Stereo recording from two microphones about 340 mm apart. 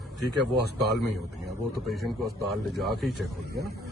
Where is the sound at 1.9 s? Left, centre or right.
Centre.